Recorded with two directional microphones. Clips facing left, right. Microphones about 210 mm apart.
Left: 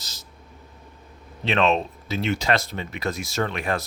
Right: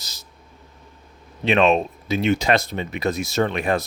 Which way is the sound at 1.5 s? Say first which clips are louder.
Right 4 dB; 15° right (ahead or behind).